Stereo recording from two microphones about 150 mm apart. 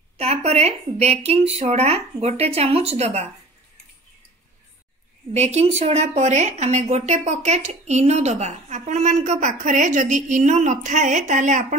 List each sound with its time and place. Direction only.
0.2 s a woman's voice: 45° right (ahead or behind)
5.3 s a woman's voice: 45° right (ahead or behind)